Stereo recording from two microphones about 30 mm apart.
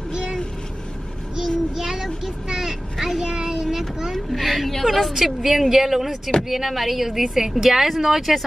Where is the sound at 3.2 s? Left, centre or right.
Right.